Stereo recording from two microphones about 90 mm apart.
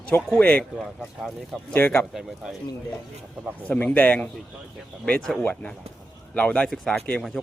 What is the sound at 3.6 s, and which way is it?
Speech, 15° left (ahead or behind).